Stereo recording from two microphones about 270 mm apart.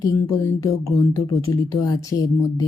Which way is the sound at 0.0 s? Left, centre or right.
Centre.